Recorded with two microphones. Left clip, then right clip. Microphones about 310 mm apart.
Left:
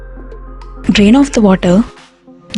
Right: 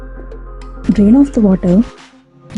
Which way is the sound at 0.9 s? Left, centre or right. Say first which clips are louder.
Left 2 dB; left.